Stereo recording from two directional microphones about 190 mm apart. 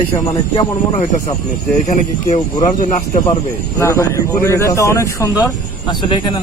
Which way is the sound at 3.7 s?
15° left (ahead or behind).